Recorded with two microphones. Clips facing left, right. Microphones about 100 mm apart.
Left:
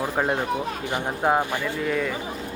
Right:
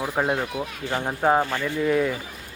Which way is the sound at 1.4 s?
15° left (ahead or behind).